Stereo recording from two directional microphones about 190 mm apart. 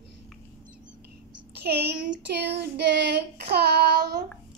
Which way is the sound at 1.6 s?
60° right (ahead or behind).